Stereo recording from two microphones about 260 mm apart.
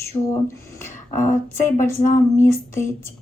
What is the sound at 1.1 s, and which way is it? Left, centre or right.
A woman's voice, left.